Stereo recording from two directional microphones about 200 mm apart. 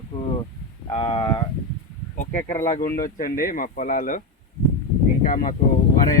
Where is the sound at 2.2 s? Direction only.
40° left (ahead or behind).